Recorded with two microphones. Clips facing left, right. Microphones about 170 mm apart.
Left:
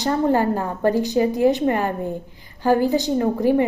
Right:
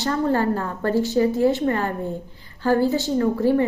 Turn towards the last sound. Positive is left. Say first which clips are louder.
# left 1 dB
turn(degrees=15)  # may be behind; listen again after turning